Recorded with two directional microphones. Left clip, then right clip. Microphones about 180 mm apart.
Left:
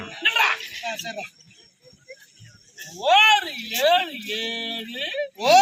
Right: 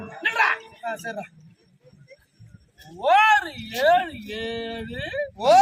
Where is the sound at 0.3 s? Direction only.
5° left (ahead or behind).